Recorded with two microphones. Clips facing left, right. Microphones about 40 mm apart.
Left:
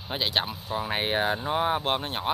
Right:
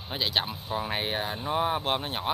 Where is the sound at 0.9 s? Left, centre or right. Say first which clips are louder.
Left 4 dB; centre.